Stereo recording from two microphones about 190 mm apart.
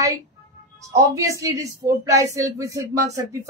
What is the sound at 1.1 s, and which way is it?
A woman's voice, 15° right (ahead or behind).